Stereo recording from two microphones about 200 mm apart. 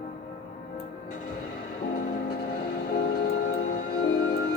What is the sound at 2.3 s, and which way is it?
Vehicle, 50° left (ahead or behind).